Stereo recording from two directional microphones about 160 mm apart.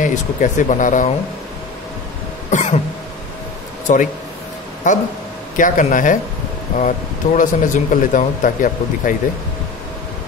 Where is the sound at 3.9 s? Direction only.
50° left (ahead or behind).